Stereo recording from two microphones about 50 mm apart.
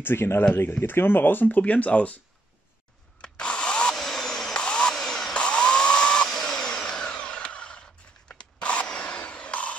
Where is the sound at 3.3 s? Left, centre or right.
Left.